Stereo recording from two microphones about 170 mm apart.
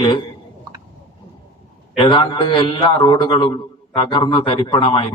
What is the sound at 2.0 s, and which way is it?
A man's voice, 30° left (ahead or behind).